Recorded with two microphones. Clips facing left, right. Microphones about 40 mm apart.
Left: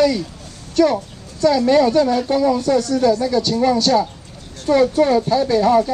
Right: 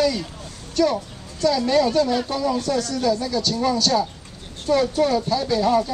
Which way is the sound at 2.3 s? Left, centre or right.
Left.